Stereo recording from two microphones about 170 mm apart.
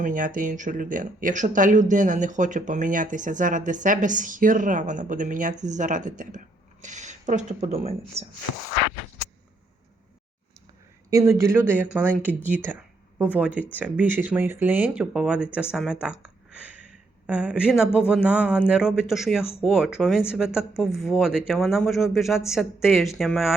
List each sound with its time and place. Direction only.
0.0 s speech: 50° right (ahead or behind)
11.1 s speech: 20° right (ahead or behind); by 23.6 s centre (ahead or behind)